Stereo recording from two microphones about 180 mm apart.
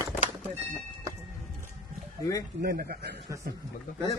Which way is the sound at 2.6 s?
55° right (ahead or behind).